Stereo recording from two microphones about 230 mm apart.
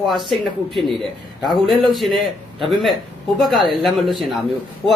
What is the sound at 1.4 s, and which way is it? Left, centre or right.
A man's voice, centre.